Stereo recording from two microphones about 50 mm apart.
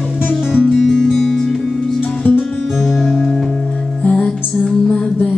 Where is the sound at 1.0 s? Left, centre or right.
Centre.